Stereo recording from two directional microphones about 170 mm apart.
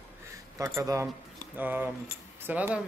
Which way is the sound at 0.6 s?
20° right (ahead or behind).